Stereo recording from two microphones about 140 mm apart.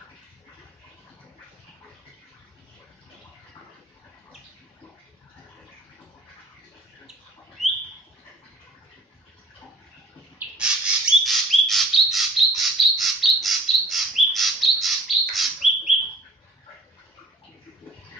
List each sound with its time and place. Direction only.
10.3 s bird: 5° right (ahead or behind)